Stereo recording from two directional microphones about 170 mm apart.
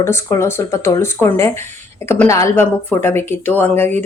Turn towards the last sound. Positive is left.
turn(degrees=10)  # may be behind; listen again after turning